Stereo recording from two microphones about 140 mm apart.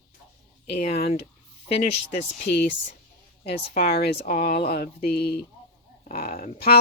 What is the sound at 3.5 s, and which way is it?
Speech, 90° left.